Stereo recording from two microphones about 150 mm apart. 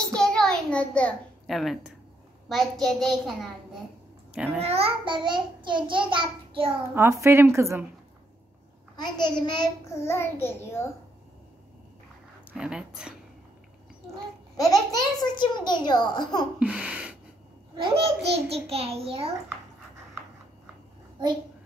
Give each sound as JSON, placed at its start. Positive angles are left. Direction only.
{"t": 0.0, "sound": "a sound", "side_deg": 5}
{"t": 2.4, "sound": "a child's voice", "side_deg": 0}
{"t": 4.6, "sound": "a child's voice", "side_deg": -45}
{"t": 7.0, "sound": "a woman's voice", "side_deg": -20}
{"t": 8.9, "sound": "a child's voice", "side_deg": 30}
{"t": 12.5, "sound": "a child's voice", "side_deg": -5}
{"t": 14.7, "sound": "a child's voice", "side_deg": 25}
{"t": 16.5, "sound": "a sound", "side_deg": -10}
{"t": 17.7, "sound": "a child's voice", "side_deg": -35}